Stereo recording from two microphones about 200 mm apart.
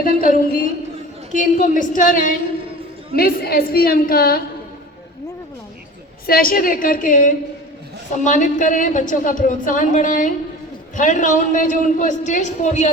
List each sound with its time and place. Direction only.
0.0 s a woman's voice: 45° left (ahead or behind)
6.2 s a woman's voice: 45° left (ahead or behind)